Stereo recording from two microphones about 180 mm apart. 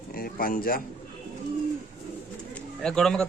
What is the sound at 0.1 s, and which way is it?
Speech, 55° left (ahead or behind).